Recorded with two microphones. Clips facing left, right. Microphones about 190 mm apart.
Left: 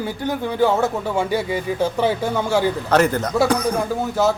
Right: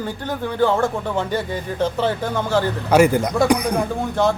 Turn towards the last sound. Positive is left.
turn(degrees=5)  # may be behind; listen again after turning